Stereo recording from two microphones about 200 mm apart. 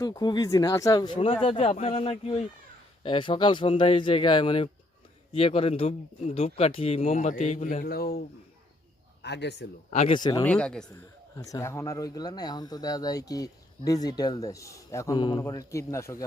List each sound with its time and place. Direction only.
0.0 s a man's voice: 20° left (ahead or behind); by 8.2 s 50° left (ahead or behind)
9.2 s speech: 60° left (ahead or behind)
9.9 s a man's voice: 35° left (ahead or behind)
10.2 s speech: 20° left (ahead or behind)
10.4 s speech: 5° left (ahead or behind)
11.3 s speech: 15° left (ahead or behind)